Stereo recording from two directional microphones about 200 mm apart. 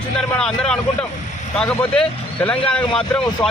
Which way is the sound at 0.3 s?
5° left (ahead or behind).